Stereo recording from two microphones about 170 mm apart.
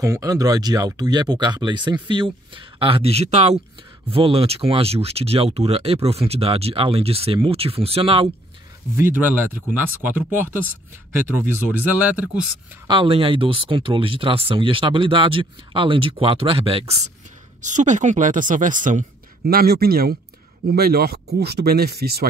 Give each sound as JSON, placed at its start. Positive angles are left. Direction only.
{"t": 0.0, "sound": "speech", "side_deg": -20}
{"t": 8.9, "sound": "speech", "side_deg": -15}
{"t": 12.8, "sound": "speech", "side_deg": -30}